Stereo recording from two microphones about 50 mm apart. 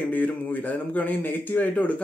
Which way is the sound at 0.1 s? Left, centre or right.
Left.